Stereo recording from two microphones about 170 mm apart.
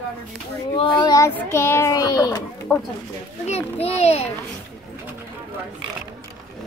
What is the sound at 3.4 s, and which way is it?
Speech, 35° left (ahead or behind).